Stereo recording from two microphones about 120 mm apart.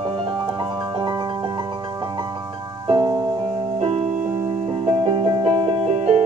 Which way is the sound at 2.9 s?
40° right (ahead or behind).